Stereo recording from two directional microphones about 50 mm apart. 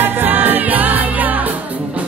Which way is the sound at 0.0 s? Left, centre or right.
Right.